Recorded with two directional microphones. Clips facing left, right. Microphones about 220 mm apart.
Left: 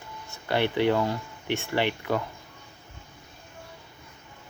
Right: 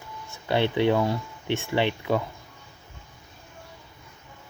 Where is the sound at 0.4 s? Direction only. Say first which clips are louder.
Right 1 dB; 20° right (ahead or behind).